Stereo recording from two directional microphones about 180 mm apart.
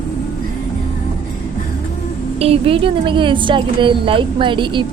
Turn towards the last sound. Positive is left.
turn(degrees=-25)  # may be behind; listen again after turning